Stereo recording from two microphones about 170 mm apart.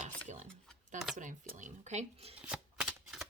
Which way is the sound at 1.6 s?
40° right (ahead or behind).